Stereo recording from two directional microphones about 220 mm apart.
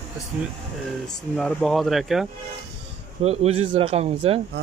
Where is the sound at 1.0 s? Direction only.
Centre (ahead or behind).